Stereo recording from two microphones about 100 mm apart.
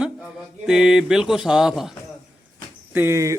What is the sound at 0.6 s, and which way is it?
Speech, 5° right (ahead or behind).